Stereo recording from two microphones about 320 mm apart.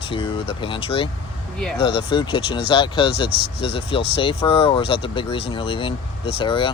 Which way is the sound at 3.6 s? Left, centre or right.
Centre.